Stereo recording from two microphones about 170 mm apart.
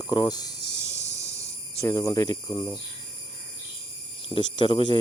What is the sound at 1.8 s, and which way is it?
Speech, 20° left (ahead or behind).